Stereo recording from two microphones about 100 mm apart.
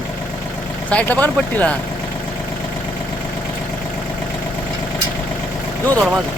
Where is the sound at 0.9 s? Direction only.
15° left (ahead or behind).